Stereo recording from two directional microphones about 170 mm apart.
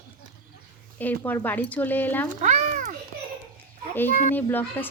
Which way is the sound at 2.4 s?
45° right (ahead or behind).